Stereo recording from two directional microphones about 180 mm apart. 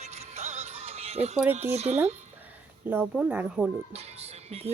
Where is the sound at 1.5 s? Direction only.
35° right (ahead or behind).